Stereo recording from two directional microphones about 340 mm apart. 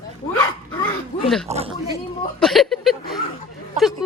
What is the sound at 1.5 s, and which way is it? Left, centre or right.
Speech, centre.